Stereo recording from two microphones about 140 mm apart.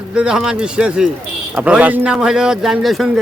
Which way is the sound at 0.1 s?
5° right (ahead or behind).